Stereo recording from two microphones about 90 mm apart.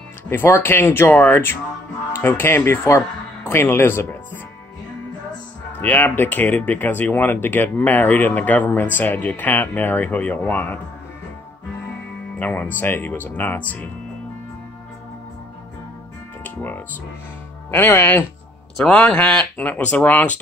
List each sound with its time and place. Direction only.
0.3 s speech: 25° left (ahead or behind)
5.8 s speech: 20° left (ahead or behind)
12.4 s speech: 20° left (ahead or behind)
16.4 s speech: 20° left (ahead or behind)